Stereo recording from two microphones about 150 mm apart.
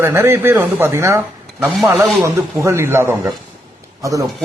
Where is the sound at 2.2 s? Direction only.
20° right (ahead or behind).